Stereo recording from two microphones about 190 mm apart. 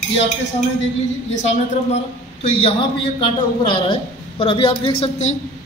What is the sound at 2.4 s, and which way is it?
A woman's voice, 25° left (ahead or behind).